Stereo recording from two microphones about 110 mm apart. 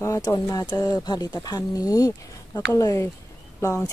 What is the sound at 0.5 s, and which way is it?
A woman's voice, 30° left (ahead or behind).